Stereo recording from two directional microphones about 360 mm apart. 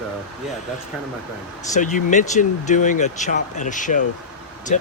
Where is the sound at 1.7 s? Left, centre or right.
Left.